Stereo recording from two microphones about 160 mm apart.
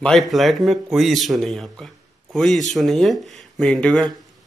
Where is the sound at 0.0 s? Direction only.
Centre (ahead or behind).